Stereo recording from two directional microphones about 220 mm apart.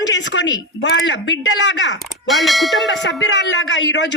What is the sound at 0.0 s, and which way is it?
A woman's voice, 55° left (ahead or behind).